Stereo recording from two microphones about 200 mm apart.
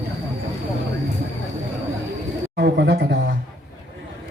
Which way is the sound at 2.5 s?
55° right (ahead or behind).